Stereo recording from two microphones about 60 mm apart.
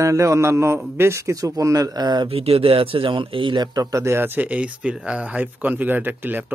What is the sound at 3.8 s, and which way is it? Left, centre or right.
Speech, right.